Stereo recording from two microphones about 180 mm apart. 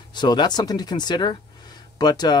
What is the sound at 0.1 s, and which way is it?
Speech, 25° left (ahead or behind).